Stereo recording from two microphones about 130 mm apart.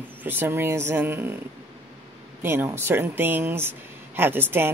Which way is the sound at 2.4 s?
20° right (ahead or behind).